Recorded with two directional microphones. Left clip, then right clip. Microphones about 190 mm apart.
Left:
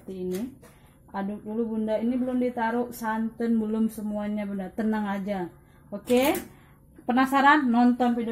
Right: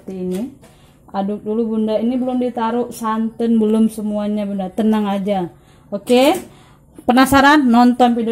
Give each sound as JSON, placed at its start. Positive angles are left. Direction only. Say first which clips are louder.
{"t": 1.1, "sound": "a woman's voice", "louder": "right 11 dB", "side_deg": -30}